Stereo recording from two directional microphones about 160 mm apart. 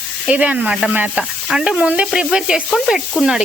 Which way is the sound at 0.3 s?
10° right (ahead or behind).